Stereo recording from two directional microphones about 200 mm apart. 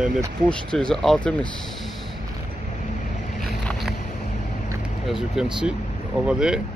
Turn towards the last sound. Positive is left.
turn(degrees=-5)  # may be behind; listen again after turning